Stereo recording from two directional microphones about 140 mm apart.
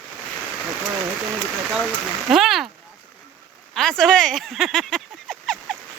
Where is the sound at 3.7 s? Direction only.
5° left (ahead or behind).